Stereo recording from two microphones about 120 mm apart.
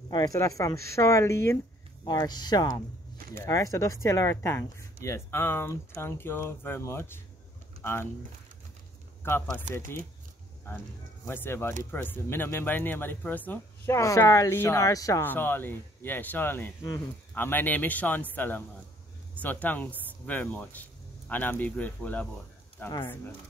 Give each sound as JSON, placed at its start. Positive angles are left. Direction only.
{"t": 0.1, "sound": "speech", "side_deg": 30}
{"t": 2.2, "sound": "speech", "side_deg": 35}
{"t": 9.2, "sound": "speech", "side_deg": 20}
{"t": 11.2, "sound": "speech", "side_deg": 20}
{"t": 15.2, "sound": "speech", "side_deg": 15}